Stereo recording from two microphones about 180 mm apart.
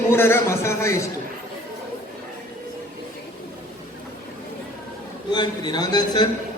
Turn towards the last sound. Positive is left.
turn(degrees=20)  # may be behind; listen again after turning